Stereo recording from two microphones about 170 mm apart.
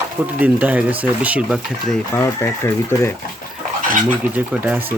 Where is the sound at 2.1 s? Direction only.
15° left (ahead or behind).